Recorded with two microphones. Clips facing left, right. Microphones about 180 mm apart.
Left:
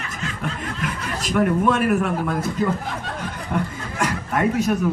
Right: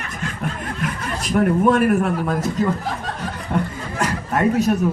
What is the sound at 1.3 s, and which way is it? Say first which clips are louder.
Speech: right 3 dB; 40° right (ahead or behind).